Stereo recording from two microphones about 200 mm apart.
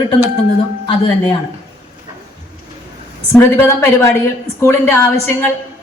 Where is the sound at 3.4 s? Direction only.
15° left (ahead or behind).